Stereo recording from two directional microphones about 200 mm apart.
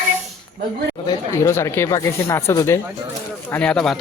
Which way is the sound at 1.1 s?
15° left (ahead or behind).